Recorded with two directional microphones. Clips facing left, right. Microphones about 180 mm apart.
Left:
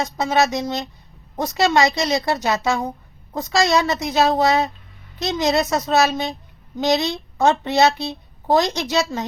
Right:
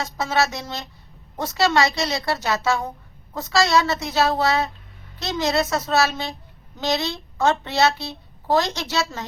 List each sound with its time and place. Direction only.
0.0 s a woman's voice: 20° left (ahead or behind)